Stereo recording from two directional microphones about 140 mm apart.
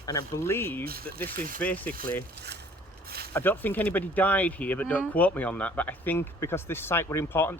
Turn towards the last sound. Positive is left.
turn(degrees=15)  # may be behind; listen again after turning